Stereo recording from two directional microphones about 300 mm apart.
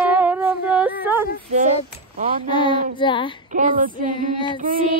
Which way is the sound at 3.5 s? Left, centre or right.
Right.